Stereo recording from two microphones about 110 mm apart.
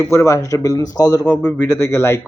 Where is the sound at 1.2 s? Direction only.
10° left (ahead or behind).